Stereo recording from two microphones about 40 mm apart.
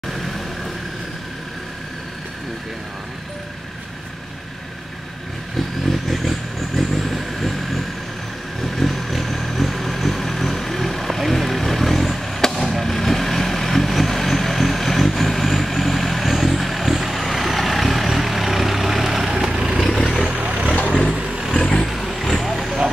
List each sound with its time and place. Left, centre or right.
5.9 s vehicle: centre
19.8 s vehicle: centre
20.3 s vehicle: right
21.5 s vehicle: centre
21.8 s vehicle: centre